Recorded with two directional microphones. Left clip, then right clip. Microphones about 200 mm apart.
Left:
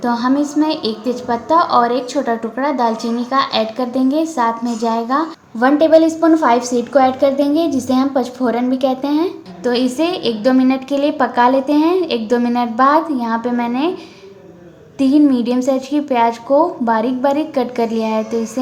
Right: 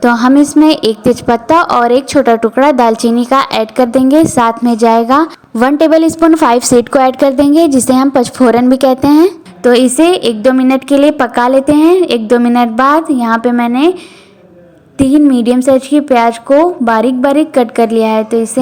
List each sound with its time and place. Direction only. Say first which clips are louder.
0.0 s a woman's voice: right 9 dB; 45° right (ahead or behind)
14.9 s a woman's voice: right 5 dB; 30° right (ahead or behind)